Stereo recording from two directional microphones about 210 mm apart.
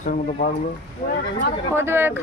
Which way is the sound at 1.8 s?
10° right (ahead or behind).